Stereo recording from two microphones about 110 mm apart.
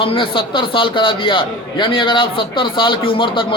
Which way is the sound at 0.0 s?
50° left (ahead or behind).